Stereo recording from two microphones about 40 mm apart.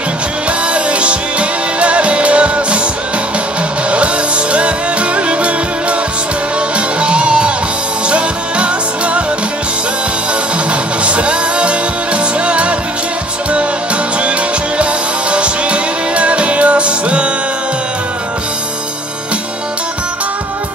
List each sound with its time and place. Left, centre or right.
0.5 s music: right
3.9 s music: right
7.0 s music: right
11.1 s music: right
15.3 s music: right